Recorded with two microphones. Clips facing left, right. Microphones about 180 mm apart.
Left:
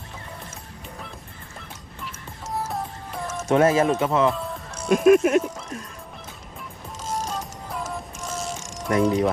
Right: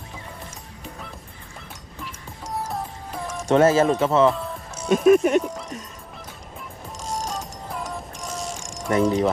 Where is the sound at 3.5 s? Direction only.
30° right (ahead or behind).